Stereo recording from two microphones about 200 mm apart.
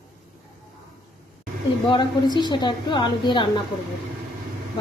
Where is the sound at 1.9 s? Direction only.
20° left (ahead or behind).